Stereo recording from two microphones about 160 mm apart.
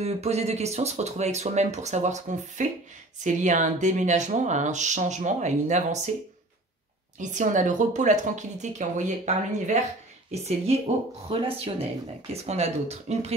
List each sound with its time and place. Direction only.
0.0 s speech: 40° right (ahead or behind)
7.2 s speech: 50° right (ahead or behind)